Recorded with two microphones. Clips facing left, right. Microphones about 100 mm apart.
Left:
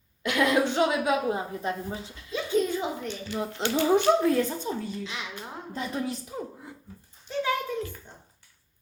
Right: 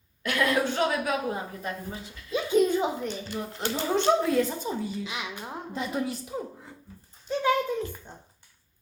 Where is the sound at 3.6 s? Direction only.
20° left (ahead or behind).